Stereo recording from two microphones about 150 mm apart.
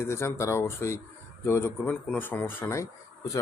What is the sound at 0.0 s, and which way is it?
Speech, 15° left (ahead or behind).